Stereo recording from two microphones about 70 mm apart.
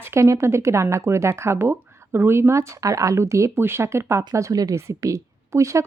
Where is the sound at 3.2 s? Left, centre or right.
Right.